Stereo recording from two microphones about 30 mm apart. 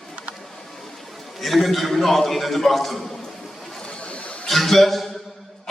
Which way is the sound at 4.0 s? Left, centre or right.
Left.